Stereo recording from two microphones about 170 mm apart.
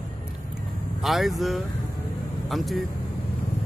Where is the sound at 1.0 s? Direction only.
Centre (ahead or behind).